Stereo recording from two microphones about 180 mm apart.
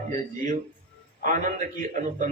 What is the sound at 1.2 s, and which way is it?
A man's voice, 45° right (ahead or behind).